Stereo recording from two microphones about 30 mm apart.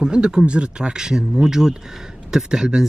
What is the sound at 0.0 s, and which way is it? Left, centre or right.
Speech, right.